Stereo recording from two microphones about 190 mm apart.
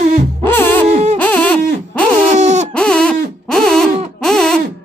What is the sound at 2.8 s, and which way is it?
Owl, 5° left (ahead or behind).